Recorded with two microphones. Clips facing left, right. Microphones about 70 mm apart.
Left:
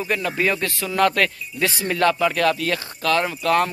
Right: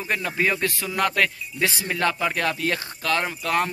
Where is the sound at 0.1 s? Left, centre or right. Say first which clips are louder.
Left 1 dB; centre.